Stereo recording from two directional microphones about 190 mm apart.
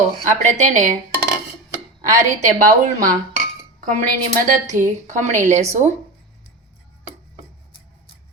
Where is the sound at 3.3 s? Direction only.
45° right (ahead or behind).